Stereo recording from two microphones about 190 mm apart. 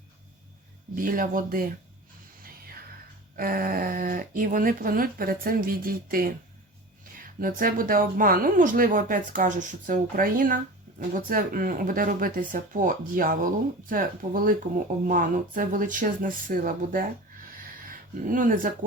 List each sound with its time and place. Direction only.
0.9 s speech: 45° right (ahead or behind)
3.3 s speech: 50° right (ahead or behind)
17.6 s a sound: 45° right (ahead or behind)